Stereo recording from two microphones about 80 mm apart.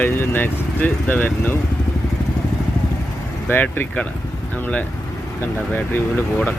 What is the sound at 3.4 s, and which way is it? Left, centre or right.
Speech, left.